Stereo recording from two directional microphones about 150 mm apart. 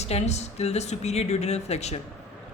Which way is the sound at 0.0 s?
45° left (ahead or behind).